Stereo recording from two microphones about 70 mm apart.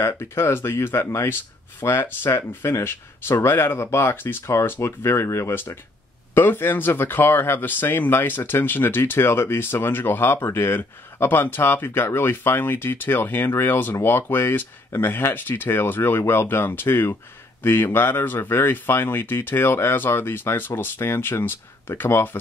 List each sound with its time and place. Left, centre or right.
0.0 s speech: left